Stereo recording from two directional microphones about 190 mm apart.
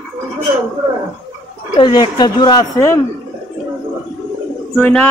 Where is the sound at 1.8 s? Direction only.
20° left (ahead or behind).